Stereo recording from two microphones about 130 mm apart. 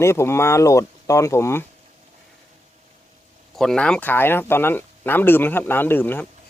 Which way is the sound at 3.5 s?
5° left (ahead or behind).